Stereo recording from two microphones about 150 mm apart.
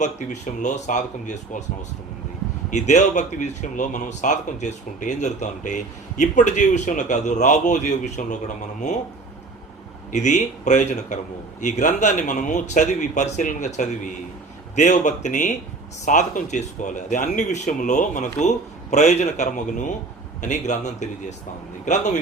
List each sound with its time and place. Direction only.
0.0 s speech: 55° left (ahead or behind)
2.6 s speech: 50° left (ahead or behind)
10.1 s speech: 50° left (ahead or behind)